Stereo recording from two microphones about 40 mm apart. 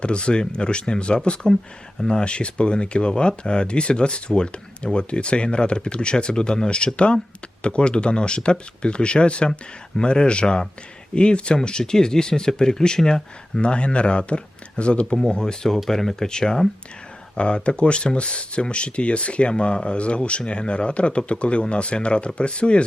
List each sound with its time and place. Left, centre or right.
0.0 s speech: left
13.6 s speech: left